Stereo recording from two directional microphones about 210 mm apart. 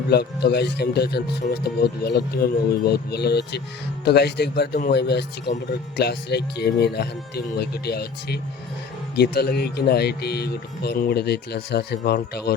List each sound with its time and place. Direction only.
0.1 s speech: 50° left (ahead or behind)